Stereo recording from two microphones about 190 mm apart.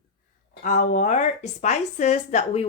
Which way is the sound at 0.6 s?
40° left (ahead or behind).